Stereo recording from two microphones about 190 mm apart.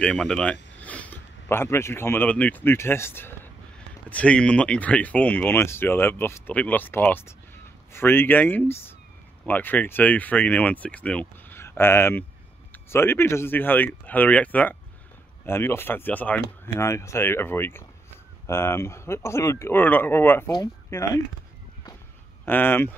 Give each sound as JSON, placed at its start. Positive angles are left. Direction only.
{"t": 0.0, "sound": "speech", "side_deg": 5}
{"t": 22.4, "sound": "speech", "side_deg": 10}